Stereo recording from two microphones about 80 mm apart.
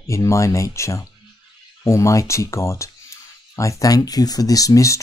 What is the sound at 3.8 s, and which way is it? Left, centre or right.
Speech, left.